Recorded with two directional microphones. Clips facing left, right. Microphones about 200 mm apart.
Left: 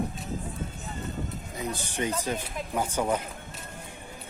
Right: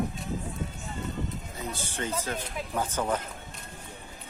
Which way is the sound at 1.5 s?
15° left (ahead or behind).